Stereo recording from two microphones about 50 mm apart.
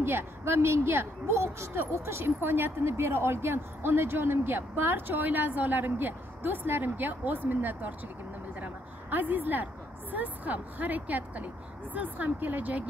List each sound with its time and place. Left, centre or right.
0.0 s a woman's voice: right
8.5 s a sound: right
10.1 s speech: right